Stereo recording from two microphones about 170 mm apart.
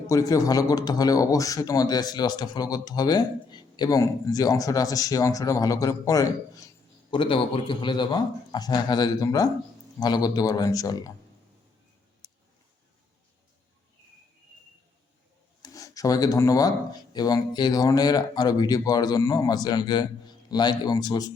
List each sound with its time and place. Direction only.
0.1 s speech: 20° left (ahead or behind)
7.1 s speech: 30° left (ahead or behind)
12.2 s a sound: 25° left (ahead or behind)
15.6 s speech: 20° left (ahead or behind)